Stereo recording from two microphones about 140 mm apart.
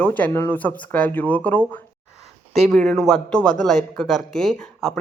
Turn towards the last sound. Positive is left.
turn(degrees=5)  # may be behind; listen again after turning